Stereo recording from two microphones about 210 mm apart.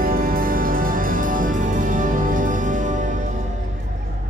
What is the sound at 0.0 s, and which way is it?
Music, 45° right (ahead or behind).